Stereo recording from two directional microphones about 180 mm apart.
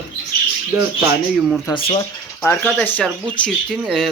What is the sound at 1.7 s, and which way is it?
Speech, 25° left (ahead or behind).